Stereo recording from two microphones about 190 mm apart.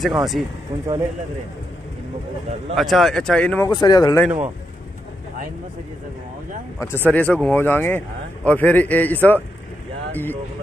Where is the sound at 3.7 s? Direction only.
20° left (ahead or behind).